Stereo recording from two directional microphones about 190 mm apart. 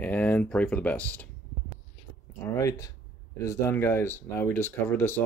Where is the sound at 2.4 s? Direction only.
15° left (ahead or behind).